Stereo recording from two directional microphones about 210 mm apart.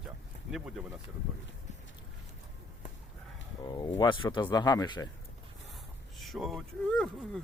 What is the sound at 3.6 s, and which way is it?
Speech, 20° left (ahead or behind).